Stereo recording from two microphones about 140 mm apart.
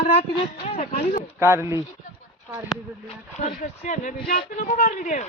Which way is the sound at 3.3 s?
65° left (ahead or behind).